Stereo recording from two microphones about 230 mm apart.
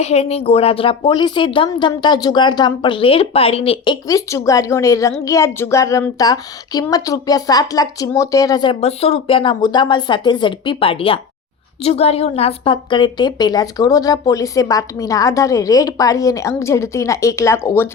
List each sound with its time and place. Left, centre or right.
0.0 s a woman's voice: left; by 17.8 s centre